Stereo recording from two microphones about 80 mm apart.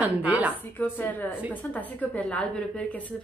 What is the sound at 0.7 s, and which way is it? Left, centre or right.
A woman's voice, left.